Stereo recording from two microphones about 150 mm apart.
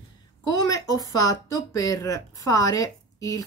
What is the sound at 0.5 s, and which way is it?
Speech, 25° left (ahead or behind).